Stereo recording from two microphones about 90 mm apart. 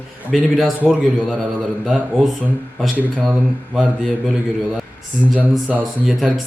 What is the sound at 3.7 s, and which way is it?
A man's voice, 5° right (ahead or behind).